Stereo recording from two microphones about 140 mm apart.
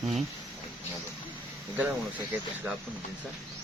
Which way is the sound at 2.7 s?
10° right (ahead or behind).